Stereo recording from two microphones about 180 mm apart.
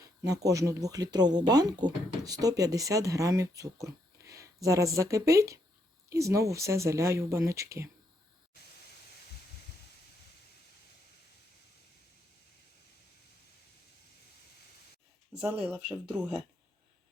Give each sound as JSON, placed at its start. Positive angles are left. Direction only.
{"t": 0.0, "sound": "speech", "side_deg": -20}
{"t": 15.6, "sound": "speech", "side_deg": -5}